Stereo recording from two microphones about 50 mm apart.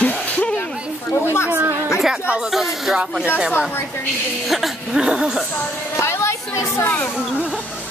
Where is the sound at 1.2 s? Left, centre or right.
Left.